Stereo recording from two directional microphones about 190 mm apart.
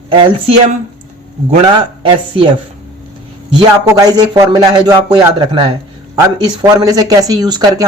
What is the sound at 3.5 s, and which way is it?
Speech, 20° right (ahead or behind).